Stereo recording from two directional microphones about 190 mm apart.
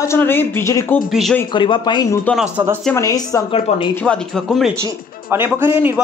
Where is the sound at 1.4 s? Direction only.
25° left (ahead or behind).